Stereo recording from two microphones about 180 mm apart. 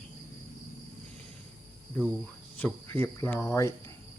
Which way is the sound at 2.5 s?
10° left (ahead or behind).